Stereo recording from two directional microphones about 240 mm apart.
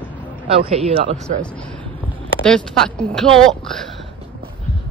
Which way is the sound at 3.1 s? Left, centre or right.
Centre.